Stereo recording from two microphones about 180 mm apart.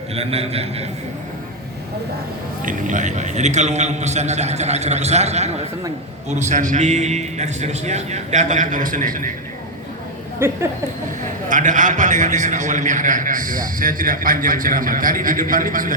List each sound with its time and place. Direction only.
0.1 s a man's voice: 35° right (ahead or behind)
2.6 s a man's voice: 45° right (ahead or behind)
10.4 s a sound: 15° right (ahead or behind)
11.4 s a man's voice: 45° right (ahead or behind)